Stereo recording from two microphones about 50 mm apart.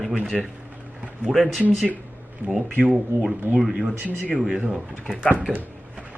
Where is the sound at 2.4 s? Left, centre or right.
Centre.